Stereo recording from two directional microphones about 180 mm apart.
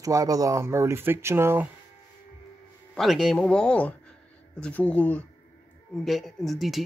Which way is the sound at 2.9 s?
Centre (ahead or behind).